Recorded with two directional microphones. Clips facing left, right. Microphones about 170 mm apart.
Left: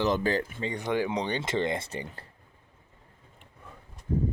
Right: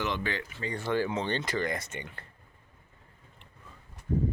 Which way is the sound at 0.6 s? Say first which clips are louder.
Left 1 dB; 20° left (ahead or behind).